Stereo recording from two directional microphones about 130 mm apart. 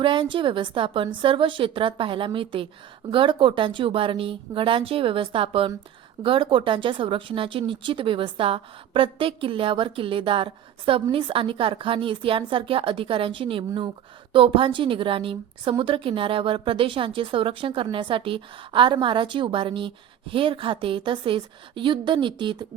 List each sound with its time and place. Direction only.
0.0 s a woman's voice: 40° right (ahead or behind)